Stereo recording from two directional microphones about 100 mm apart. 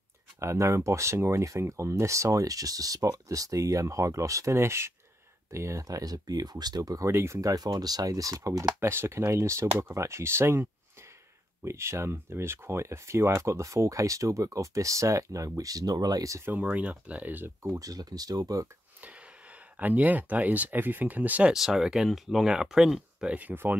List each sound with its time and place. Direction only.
0.4 s speech: 30° right (ahead or behind)
7.1 s speech: 25° right (ahead or behind)
7.5 s speech: 40° right (ahead or behind)
8.7 s speech: 25° right (ahead or behind)
16.5 s speech: 15° right (ahead or behind)
17.7 s speech: 40° right (ahead or behind)
19.8 s speech: 15° right (ahead or behind)